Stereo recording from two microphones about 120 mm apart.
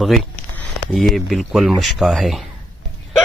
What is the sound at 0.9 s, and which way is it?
Speech, centre (ahead or behind).